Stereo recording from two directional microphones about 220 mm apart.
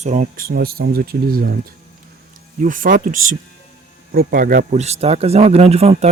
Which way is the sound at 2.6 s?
40° right (ahead or behind).